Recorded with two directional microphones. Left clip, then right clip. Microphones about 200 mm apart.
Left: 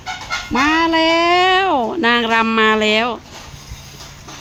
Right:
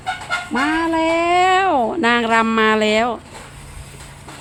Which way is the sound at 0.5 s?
30° left (ahead or behind).